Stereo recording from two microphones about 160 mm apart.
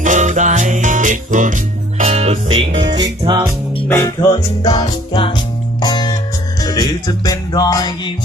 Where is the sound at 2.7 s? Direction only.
30° right (ahead or behind).